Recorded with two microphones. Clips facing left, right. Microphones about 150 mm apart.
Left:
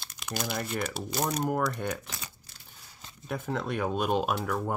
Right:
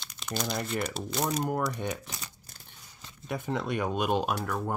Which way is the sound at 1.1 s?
Centre (ahead or behind).